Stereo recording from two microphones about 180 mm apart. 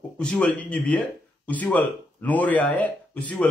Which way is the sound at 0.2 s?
5° left (ahead or behind).